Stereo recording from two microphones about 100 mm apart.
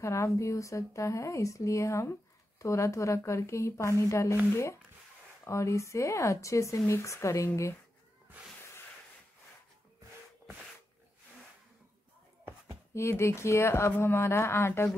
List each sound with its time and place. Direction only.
0.0 s speech: 30° left (ahead or behind)
5.4 s speech: 30° left (ahead or behind)
12.9 s speech: 30° left (ahead or behind)